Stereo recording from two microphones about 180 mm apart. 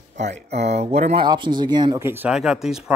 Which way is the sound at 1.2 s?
25° right (ahead or behind).